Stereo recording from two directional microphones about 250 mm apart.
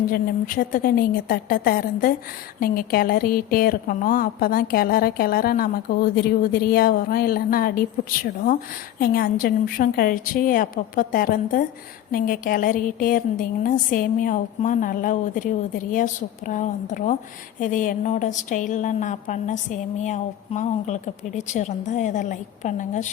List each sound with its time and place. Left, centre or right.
0.1 s a woman's voice: left